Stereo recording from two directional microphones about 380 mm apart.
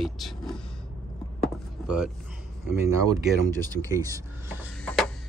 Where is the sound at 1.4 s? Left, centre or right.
Centre.